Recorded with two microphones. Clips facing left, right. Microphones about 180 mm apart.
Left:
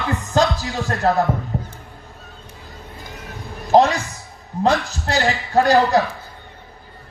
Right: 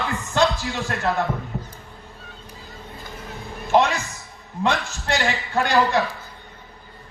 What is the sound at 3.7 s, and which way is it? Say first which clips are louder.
A woman's voice: left 5 dB; 35° left (ahead or behind).